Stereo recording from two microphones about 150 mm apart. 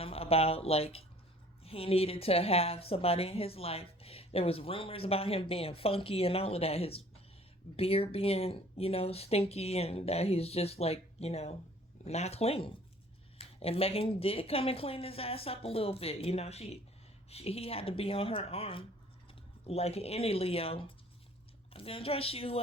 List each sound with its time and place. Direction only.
0.0 s a woman's voice: 40° left (ahead or behind)